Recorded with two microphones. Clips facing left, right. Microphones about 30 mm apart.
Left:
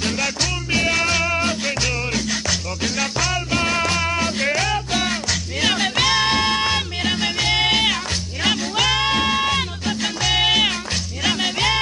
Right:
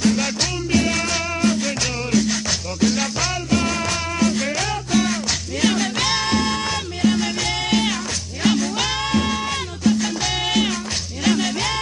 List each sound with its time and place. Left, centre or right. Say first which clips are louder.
0.7 s music: left 2 dB; centre
3.0 s music: left 1 dB; centre
3.5 s music: left 1 dB; left
5.6 s music: left 1 dB; left
8.5 s music: right 1 dB; centre
9.0 s music: left 3 dB; left